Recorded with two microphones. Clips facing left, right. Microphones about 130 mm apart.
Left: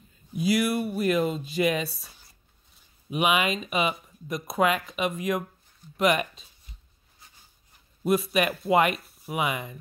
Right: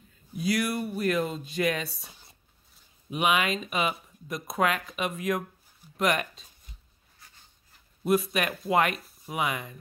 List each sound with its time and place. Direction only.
0.4 s speech: 5° left (ahead or behind)
2.0 s speech: 20° right (ahead or behind)
3.1 s speech: 5° left (ahead or behind)
8.0 s speech: centre (ahead or behind)